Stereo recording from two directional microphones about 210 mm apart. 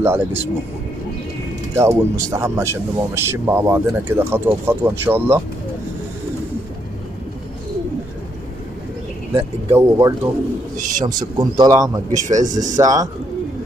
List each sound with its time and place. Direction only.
0.0 s speech: 10° right (ahead or behind)
1.8 s speech: 15° right (ahead or behind)
9.8 s speech: 15° right (ahead or behind)
10.8 s speech: 35° right (ahead or behind)
11.1 s a man's voice: 20° right (ahead or behind)
12.1 s speech: 35° right (ahead or behind)
12.7 s speech: 15° right (ahead or behind)